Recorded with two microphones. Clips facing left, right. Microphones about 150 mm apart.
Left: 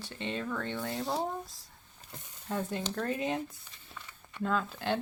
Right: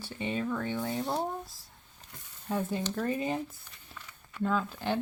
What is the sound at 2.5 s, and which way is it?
Speech, 5° right (ahead or behind).